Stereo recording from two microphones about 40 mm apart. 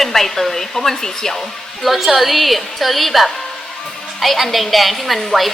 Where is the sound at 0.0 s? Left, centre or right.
Centre.